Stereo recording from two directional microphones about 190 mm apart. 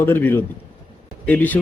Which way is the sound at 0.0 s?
10° left (ahead or behind).